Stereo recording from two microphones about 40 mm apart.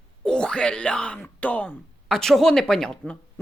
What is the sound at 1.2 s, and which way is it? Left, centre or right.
Speech, left.